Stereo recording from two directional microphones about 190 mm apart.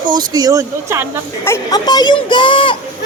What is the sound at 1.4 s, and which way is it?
Speech, 15° left (ahead or behind).